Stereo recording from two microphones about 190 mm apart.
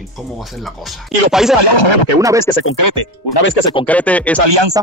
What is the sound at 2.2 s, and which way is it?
Speech, 15° right (ahead or behind).